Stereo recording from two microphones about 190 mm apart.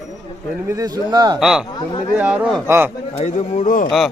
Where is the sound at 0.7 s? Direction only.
20° right (ahead or behind).